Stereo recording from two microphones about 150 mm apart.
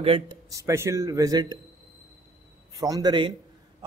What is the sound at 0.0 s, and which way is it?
Speech, 40° right (ahead or behind).